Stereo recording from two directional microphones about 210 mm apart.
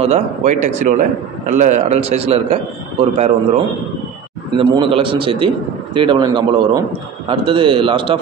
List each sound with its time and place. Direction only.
0.0 s a man's voice: 35° right (ahead or behind)
4.6 s a man's voice: 25° right (ahead or behind)